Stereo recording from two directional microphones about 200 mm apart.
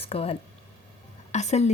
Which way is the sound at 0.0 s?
30° left (ahead or behind).